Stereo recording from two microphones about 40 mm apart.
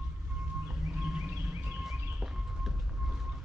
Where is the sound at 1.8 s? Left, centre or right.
Centre.